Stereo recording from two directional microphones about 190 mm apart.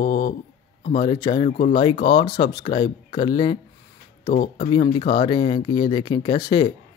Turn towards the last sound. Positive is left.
turn(degrees=25)  # may be behind; listen again after turning